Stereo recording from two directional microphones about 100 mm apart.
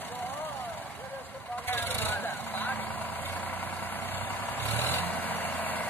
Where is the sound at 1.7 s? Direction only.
20° left (ahead or behind).